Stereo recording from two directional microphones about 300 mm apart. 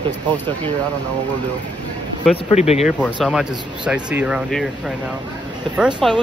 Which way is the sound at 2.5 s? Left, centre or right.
Left.